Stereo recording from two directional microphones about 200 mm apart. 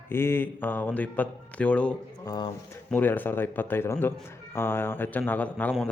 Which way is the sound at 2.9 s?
10° left (ahead or behind).